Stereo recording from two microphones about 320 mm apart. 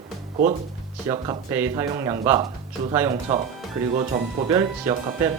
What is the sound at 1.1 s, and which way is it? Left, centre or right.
Speech, centre.